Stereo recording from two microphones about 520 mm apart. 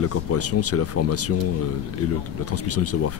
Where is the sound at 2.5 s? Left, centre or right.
Left.